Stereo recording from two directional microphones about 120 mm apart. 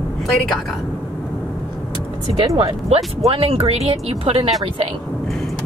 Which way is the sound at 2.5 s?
55° right (ahead or behind).